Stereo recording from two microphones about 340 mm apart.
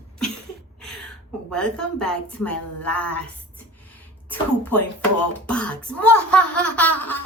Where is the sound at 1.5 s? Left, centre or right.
Centre.